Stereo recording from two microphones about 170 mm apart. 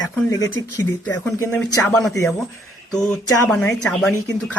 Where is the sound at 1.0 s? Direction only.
10° left (ahead or behind).